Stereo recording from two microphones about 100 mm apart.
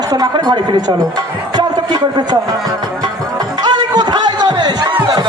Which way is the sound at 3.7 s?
45° right (ahead or behind).